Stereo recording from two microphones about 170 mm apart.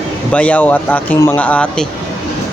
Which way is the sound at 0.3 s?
10° left (ahead or behind).